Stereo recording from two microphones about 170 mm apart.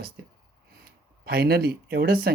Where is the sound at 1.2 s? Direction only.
65° right (ahead or behind).